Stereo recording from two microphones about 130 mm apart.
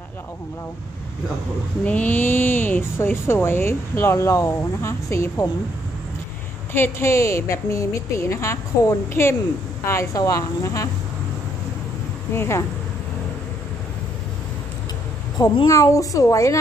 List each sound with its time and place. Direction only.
1.9 s speech: 15° left (ahead or behind)
6.7 s a woman's voice: 20° left (ahead or behind)
12.4 s a woman's voice: 20° left (ahead or behind)
15.3 s a woman's voice: 35° left (ahead or behind)